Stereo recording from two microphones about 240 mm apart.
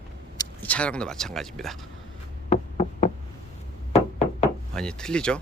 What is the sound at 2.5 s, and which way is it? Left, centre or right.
Knock, left.